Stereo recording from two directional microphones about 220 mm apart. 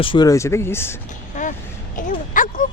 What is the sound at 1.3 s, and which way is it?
Vehicle, 35° left (ahead or behind).